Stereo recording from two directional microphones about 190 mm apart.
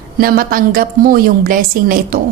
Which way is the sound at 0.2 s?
50° right (ahead or behind).